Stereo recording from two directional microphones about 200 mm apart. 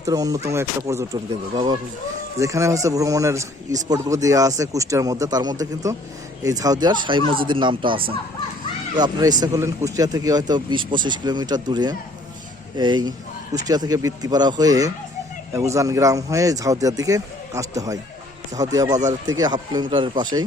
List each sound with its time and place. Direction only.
0.0 s a man's voice: 15° right (ahead or behind)